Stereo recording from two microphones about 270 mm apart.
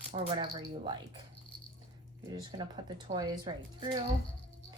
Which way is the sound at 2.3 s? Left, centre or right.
Centre.